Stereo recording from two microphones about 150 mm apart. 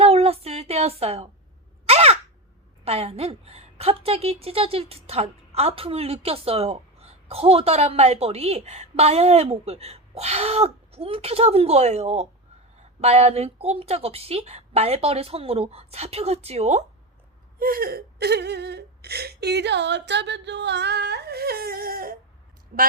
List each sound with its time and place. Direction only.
0.0 s a sound: 45° right (ahead or behind)
1.9 s crow: 45° right (ahead or behind)
2.8 s a woman's voice: 45° right (ahead or behind)
17.6 s whimper: 75° right (ahead or behind)
20.9 s whimper: 90° right
22.7 s a woman's voice: 75° right (ahead or behind)